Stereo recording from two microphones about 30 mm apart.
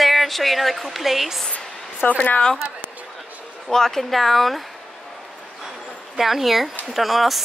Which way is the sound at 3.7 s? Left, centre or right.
Centre.